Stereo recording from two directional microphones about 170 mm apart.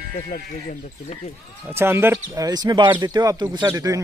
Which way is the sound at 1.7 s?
15° right (ahead or behind).